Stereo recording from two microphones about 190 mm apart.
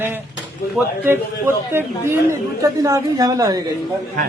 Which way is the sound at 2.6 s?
15° right (ahead or behind).